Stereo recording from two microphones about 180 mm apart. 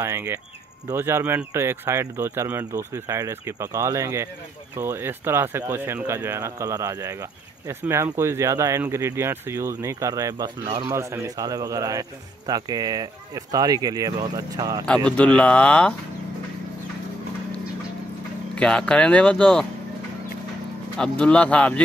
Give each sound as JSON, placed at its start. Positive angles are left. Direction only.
{"t": 0.0, "sound": "a man's voice", "side_deg": -15}
{"t": 15.3, "sound": "speech", "side_deg": 5}
{"t": 18.5, "sound": "speech", "side_deg": 5}
{"t": 21.0, "sound": "speech", "side_deg": 5}